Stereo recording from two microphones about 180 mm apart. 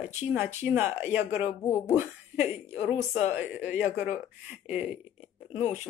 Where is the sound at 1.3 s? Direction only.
40° left (ahead or behind).